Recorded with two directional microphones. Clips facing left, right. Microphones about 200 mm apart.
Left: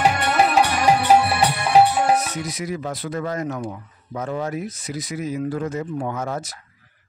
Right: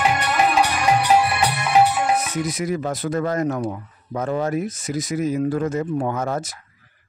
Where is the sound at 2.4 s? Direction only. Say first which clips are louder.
Right 4 dB; 50° right (ahead or behind).